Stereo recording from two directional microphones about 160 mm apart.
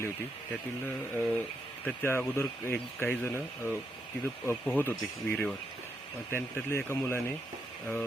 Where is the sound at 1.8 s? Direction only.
15° left (ahead or behind).